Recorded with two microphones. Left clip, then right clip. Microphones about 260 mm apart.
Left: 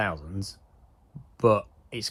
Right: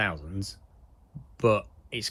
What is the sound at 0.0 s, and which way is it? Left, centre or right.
Speech, centre.